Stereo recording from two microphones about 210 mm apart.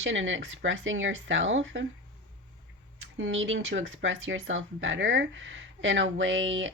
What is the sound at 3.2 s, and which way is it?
Speech, 65° right (ahead or behind).